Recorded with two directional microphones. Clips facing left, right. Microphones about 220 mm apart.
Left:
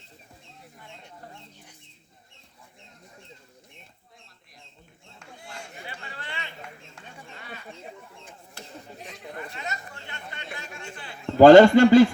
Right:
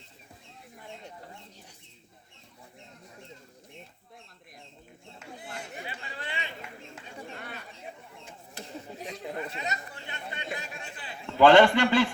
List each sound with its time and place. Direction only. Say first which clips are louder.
5.9 s chatter: right 1 dB; 20° right (ahead or behind)
9.2 s chatter: right 1 dB; 25° right (ahead or behind)
11.3 s speech: left 7 dB; 40° left (ahead or behind)